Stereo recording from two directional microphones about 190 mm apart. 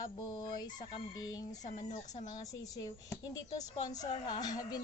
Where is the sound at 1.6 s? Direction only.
40° left (ahead or behind).